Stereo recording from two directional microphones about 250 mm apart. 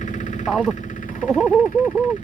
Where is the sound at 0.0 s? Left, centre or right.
Left.